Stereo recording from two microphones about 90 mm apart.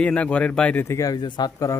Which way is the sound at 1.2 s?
45° left (ahead or behind).